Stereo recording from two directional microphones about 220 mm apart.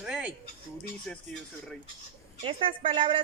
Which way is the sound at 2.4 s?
25° right (ahead or behind).